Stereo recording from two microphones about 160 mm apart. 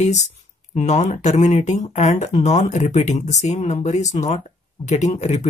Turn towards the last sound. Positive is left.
turn(degrees=45)  # may be behind; listen again after turning